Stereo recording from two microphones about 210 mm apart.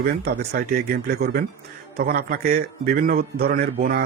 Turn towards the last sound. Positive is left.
turn(degrees=-45)  # may be behind; listen again after turning